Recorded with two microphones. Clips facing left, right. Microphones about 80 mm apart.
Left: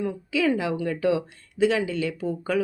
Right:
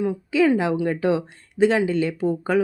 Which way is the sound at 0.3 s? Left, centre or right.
Right.